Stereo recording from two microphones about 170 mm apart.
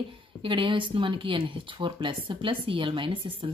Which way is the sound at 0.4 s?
30° right (ahead or behind).